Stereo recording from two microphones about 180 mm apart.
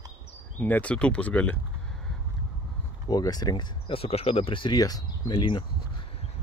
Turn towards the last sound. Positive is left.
turn(degrees=25)  # may be behind; listen again after turning